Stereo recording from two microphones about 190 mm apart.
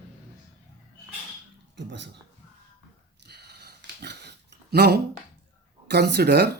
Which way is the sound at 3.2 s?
60° right (ahead or behind).